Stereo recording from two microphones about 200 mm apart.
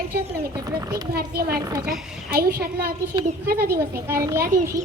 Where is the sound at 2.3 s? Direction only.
50° right (ahead or behind).